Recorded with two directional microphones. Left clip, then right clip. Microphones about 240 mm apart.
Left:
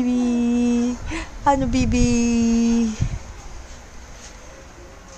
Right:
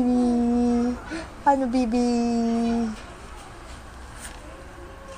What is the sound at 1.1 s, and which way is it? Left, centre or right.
A woman's voice, centre.